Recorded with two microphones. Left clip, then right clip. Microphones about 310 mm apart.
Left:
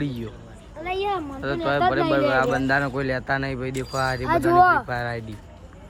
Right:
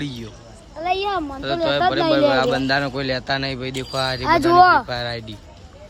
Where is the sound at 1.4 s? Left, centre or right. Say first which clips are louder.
Right 3 dB; centre.